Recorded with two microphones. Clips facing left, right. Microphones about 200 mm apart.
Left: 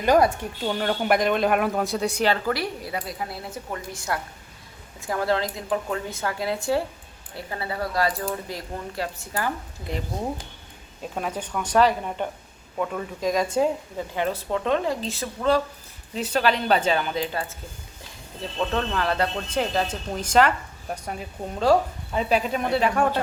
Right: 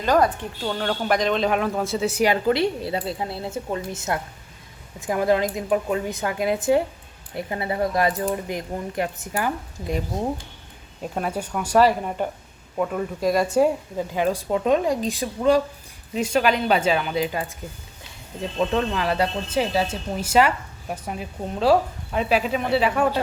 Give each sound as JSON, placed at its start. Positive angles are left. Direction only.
{"t": 0.0, "sound": "speech", "side_deg": 10}
{"t": 11.1, "sound": "speech", "side_deg": -5}
{"t": 18.5, "sound": "speech", "side_deg": -10}